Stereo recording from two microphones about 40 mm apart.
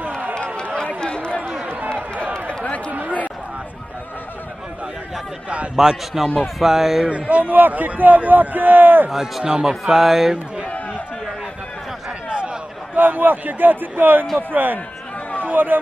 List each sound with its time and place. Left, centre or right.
1.0 s a sound: left
1.7 s run: right
2.4 s a sound: left
2.9 s a sound: right
5.8 s a man's voice: centre
7.1 s a man's voice: right
7.5 s a man's voice: right
9.1 s a man's voice: centre
9.9 s speech: centre
12.9 s a man's voice: right